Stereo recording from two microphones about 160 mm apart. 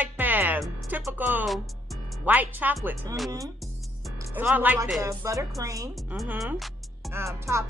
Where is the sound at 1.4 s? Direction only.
Centre (ahead or behind).